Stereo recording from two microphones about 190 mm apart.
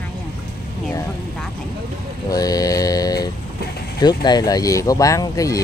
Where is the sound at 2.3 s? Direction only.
20° left (ahead or behind).